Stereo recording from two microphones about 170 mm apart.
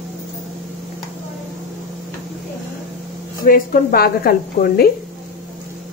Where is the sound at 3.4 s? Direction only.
55° left (ahead or behind).